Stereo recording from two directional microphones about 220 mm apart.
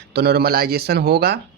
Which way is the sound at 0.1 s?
45° right (ahead or behind).